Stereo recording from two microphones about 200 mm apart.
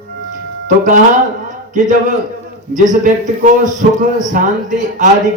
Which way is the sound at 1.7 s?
40° right (ahead or behind).